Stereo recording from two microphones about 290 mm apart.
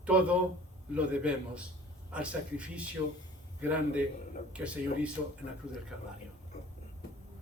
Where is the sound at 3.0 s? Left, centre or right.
Centre.